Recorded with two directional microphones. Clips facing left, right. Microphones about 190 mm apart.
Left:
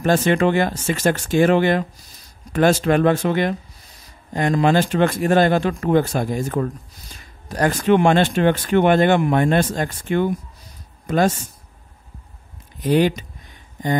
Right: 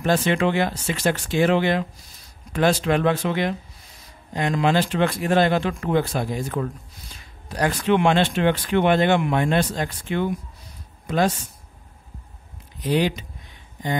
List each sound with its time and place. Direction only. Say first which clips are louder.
0.0 s speech: left 3 dB; 45° left (ahead or behind)
12.8 s speech: left 4 dB; 50° left (ahead or behind)